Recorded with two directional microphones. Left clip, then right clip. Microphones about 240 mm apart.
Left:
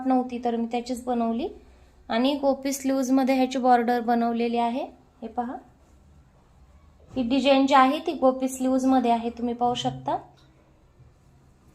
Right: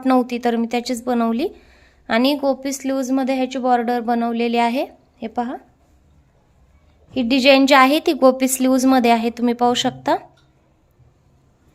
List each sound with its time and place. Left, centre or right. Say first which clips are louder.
0.0 s a woman's voice: right 7 dB; right
7.1 s a woman's voice: right 8 dB; right